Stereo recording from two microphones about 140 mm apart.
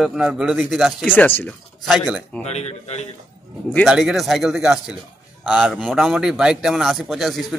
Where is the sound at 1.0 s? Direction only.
15° left (ahead or behind).